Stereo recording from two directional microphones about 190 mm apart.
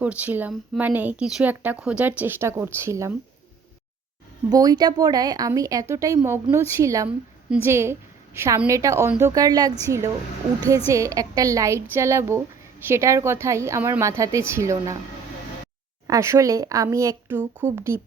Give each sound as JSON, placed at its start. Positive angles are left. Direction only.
{"t": 0.0, "sound": "speech", "side_deg": -5}
{"t": 4.4, "sound": "speech", "side_deg": -20}
{"t": 10.8, "sound": "speech", "side_deg": -15}
{"t": 16.0, "sound": "speech", "side_deg": -15}